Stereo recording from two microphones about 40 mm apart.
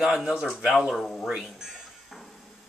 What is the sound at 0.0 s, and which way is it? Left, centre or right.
Speech, centre.